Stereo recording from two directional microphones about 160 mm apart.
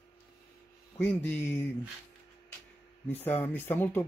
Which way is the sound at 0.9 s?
10° left (ahead or behind).